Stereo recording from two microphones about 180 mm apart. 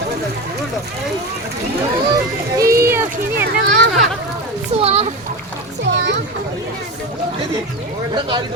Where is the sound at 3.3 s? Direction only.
70° right (ahead or behind).